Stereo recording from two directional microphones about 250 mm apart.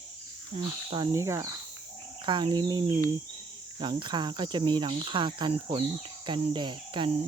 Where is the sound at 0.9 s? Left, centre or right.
Centre.